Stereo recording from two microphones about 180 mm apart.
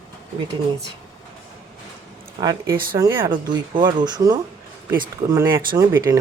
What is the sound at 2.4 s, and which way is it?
Speech, 20° right (ahead or behind).